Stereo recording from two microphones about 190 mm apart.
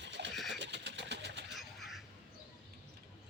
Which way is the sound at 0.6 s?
65° right (ahead or behind).